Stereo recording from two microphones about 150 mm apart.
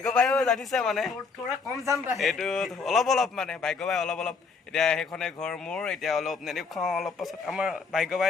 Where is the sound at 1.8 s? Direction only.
20° right (ahead or behind).